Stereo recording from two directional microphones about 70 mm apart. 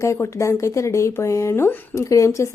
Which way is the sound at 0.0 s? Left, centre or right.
Left.